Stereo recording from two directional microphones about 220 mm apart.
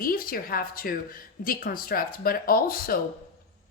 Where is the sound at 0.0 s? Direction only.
40° left (ahead or behind).